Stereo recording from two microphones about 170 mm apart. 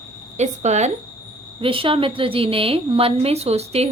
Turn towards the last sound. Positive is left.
turn(degrees=-40)  # may be behind; listen again after turning